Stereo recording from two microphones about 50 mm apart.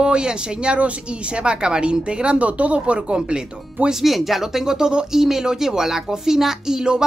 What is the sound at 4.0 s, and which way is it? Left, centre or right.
Speech, centre.